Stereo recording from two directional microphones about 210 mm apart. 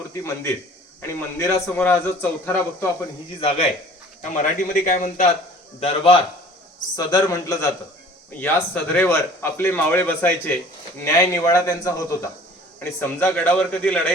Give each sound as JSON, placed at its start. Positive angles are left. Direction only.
{"t": 0.1, "sound": "a man's voice", "side_deg": 10}
{"t": 4.2, "sound": "a man's voice", "side_deg": 35}